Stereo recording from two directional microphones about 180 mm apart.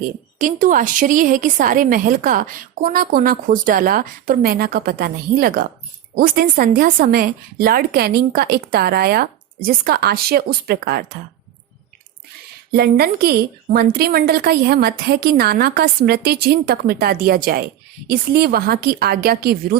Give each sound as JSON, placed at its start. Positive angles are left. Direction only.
{"t": 0.3, "sound": "a woman's voice", "side_deg": -45}
{"t": 12.7, "sound": "a woman's voice", "side_deg": -60}